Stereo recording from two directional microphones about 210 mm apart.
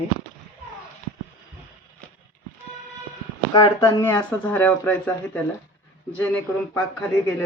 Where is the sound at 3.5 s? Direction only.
20° left (ahead or behind).